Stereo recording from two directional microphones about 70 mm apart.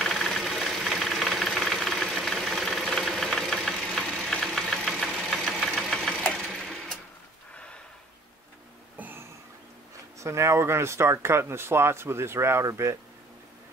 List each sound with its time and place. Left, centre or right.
0.0 s engine knocking: centre
5.9 s engine: centre
7.5 s gasp: centre
8.9 s a sound: right
10.2 s speech: right